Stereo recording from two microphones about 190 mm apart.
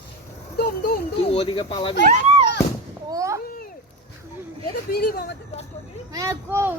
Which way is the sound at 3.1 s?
15° right (ahead or behind).